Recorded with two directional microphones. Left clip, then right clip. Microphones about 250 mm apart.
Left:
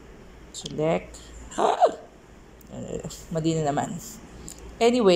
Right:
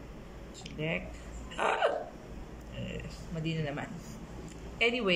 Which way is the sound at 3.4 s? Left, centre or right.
Centre.